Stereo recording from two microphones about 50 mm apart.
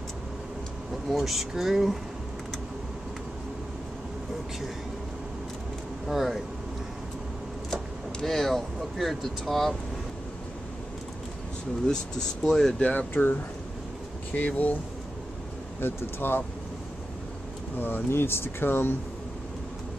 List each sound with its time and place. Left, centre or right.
1.0 s speech: centre
6.0 s speech: centre
7.7 s speech: centre
11.8 s speech: centre
12.9 s speech: left
15.8 s speech: left
17.7 s speech: left